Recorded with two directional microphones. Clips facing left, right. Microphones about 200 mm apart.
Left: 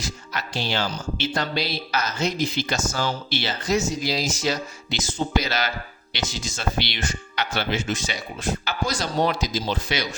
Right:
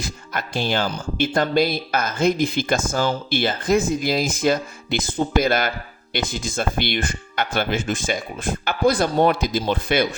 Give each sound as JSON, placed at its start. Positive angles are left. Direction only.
{"t": 0.0, "sound": "speech", "side_deg": -50}